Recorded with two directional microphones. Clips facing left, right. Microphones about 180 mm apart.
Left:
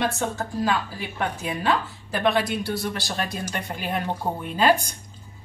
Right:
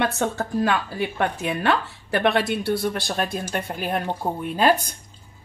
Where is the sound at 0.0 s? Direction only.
65° right (ahead or behind).